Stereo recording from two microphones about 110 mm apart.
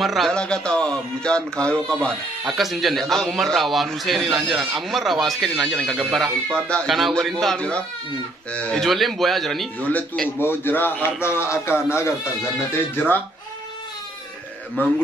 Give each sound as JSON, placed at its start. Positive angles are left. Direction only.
{"t": 0.0, "sound": "speech", "side_deg": 0}
{"t": 9.8, "sound": "a man's voice", "side_deg": 15}